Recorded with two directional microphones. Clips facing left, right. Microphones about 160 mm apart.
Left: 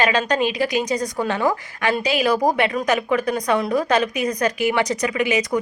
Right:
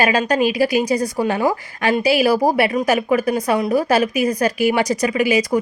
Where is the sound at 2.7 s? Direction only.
25° right (ahead or behind).